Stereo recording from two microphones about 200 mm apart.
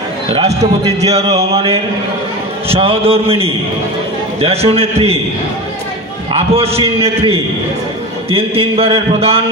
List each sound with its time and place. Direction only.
0.3 s a man's voice: 25° right (ahead or behind)
6.3 s a man's voice: 30° right (ahead or behind)